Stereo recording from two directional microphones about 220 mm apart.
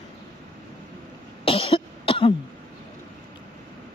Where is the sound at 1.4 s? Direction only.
25° left (ahead or behind).